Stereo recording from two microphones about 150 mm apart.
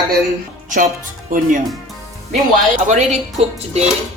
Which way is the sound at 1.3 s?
65° right (ahead or behind).